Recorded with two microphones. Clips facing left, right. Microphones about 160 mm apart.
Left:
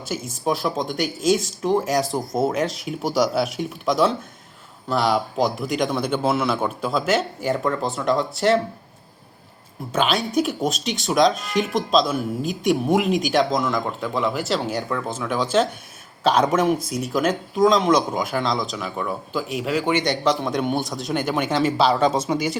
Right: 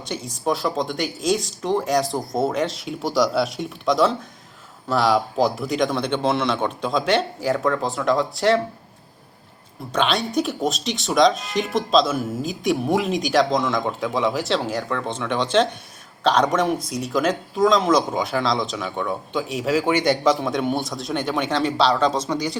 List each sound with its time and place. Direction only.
0.3 s speech: centre (ahead or behind)
9.9 s speech: 5° left (ahead or behind)